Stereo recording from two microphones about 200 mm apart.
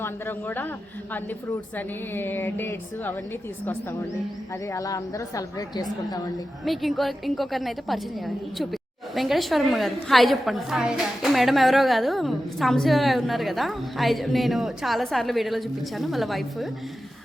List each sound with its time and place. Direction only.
0.0 s a woman's voice: 10° left (ahead or behind)
2.1 s a woman's voice: 10° left (ahead or behind)
4.7 s a woman's voice: 15° left (ahead or behind)
6.7 s a woman's voice: centre (ahead or behind)